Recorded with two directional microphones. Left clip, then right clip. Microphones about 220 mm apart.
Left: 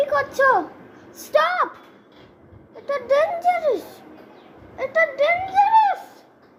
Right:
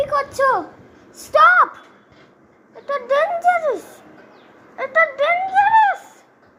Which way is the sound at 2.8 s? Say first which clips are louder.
Right 1 dB; 10° right (ahead or behind).